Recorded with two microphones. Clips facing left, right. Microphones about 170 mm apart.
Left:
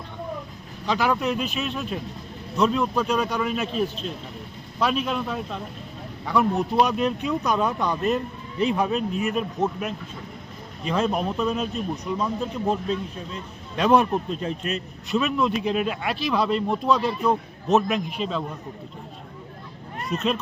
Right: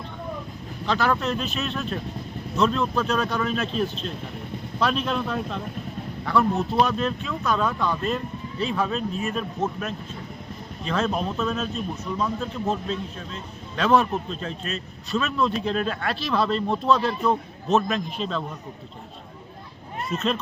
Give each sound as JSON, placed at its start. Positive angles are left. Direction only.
{"t": 0.9, "sound": "speech", "side_deg": 10}
{"t": 20.1, "sound": "speech", "side_deg": 10}